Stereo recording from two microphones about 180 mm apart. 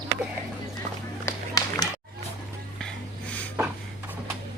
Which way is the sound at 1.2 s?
20° left (ahead or behind).